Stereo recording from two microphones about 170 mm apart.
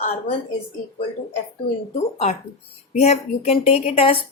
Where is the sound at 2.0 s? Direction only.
40° left (ahead or behind).